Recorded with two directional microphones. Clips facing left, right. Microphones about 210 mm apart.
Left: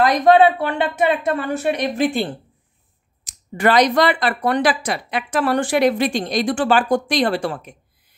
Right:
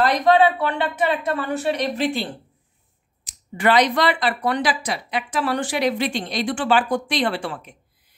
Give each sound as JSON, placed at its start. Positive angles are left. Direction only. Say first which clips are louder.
{"t": 0.2, "sound": "speech", "louder": "left 5 dB", "side_deg": 50}
{"t": 3.3, "sound": "speech", "louder": "left 2 dB", "side_deg": 40}